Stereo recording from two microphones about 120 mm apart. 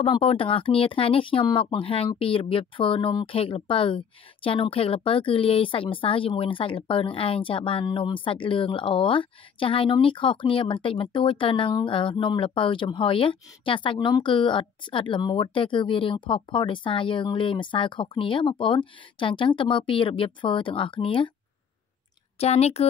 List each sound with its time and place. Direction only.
0.0 s speech: 50° left (ahead or behind)
22.4 s speech: 60° left (ahead or behind)